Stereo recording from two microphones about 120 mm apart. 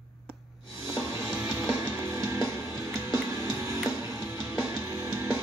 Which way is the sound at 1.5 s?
20° right (ahead or behind).